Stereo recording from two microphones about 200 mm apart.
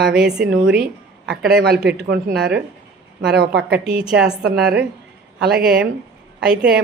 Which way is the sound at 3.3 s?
55° right (ahead or behind).